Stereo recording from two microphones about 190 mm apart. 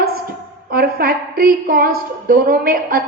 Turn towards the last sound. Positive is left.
turn(degrees=-50)  # may be behind; listen again after turning